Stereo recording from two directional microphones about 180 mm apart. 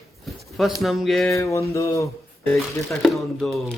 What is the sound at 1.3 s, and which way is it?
Speech, 15° left (ahead or behind).